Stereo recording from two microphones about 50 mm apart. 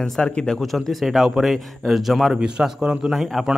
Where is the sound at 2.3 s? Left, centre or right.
Centre.